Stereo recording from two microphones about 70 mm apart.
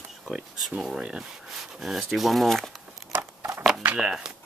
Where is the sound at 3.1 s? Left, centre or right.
Right.